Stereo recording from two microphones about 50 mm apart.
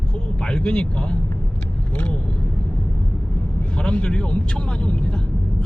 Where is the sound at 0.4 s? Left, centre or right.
Centre.